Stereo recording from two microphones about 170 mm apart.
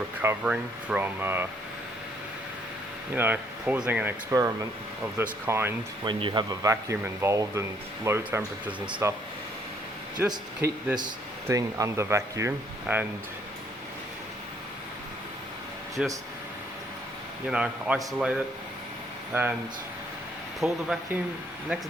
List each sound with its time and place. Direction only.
0.2 s speech: 10° right (ahead or behind)
3.2 s speech: 10° right (ahead or behind)
6.1 s speech: 30° right (ahead or behind)
10.2 s speech: 15° right (ahead or behind)
16.0 s a man's voice: 5° right (ahead or behind)
17.5 s a man's voice: 5° right (ahead or behind)
20.6 s a man's voice: centre (ahead or behind)